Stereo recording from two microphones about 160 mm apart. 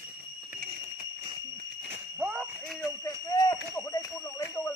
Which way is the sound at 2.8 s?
25° left (ahead or behind).